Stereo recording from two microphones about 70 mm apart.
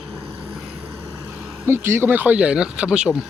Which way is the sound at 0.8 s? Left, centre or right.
Right.